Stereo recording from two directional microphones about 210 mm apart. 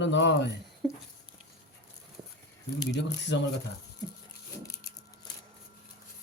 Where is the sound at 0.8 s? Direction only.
Centre (ahead or behind).